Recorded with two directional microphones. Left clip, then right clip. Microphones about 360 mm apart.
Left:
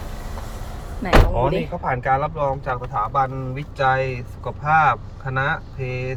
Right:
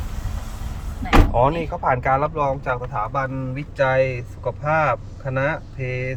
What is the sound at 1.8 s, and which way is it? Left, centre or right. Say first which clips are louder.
Speech: right 3 dB; centre.